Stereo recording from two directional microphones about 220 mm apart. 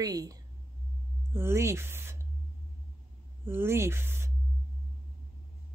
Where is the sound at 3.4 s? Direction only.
10° right (ahead or behind).